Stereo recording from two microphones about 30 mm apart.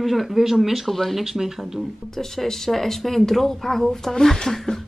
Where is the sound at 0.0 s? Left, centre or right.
Centre.